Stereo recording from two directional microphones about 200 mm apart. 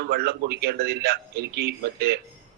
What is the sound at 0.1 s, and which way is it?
A man's voice, 50° right (ahead or behind).